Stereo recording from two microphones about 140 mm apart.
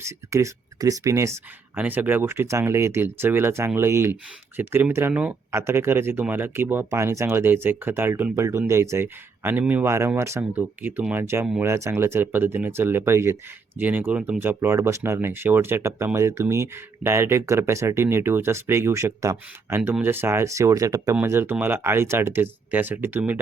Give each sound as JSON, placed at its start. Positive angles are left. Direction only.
{"t": 0.0, "sound": "speech", "side_deg": -20}